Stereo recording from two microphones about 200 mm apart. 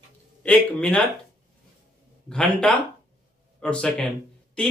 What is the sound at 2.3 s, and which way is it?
Speech, 5° left (ahead or behind).